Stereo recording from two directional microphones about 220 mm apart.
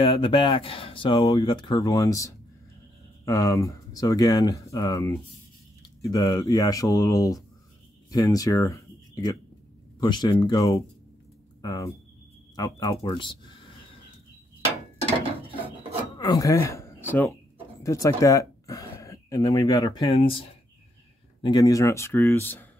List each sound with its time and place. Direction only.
0.0 s speech: 20° left (ahead or behind)
15.0 s mechanisms: 25° right (ahead or behind)
16.2 s speech: 15° left (ahead or behind)